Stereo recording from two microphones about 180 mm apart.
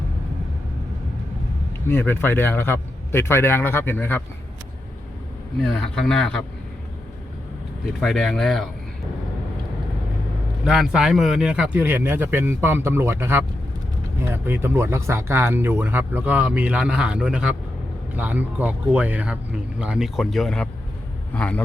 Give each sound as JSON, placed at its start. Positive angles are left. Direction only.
{"t": 1.9, "sound": "a man's voice", "side_deg": 10}
{"t": 5.6, "sound": "speech", "side_deg": 5}
{"t": 8.0, "sound": "speech", "side_deg": 0}
{"t": 10.6, "sound": "a man's voice", "side_deg": -5}